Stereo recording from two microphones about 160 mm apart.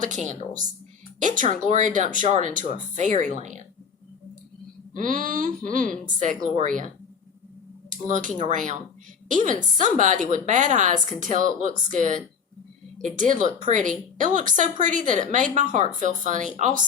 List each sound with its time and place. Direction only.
0.3 s a woman's voice: 50° right (ahead or behind)
4.9 s a woman's voice: 55° right (ahead or behind)